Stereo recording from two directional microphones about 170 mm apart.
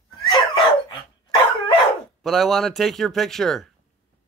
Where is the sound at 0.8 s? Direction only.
25° left (ahead or behind).